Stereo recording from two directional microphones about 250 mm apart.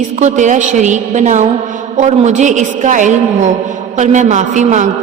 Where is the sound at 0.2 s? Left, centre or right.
Right.